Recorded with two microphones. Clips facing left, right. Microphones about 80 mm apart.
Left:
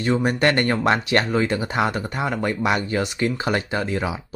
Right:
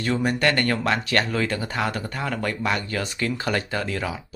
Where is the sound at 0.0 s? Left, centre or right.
Left.